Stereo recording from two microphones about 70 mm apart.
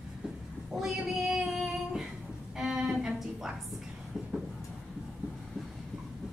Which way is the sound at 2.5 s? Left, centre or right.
Centre.